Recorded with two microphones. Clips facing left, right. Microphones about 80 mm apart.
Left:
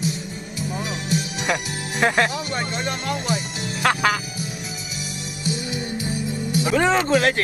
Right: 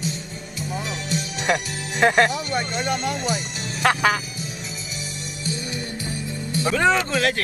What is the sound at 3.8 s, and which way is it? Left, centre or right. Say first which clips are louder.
Speech: right 1 dB; right.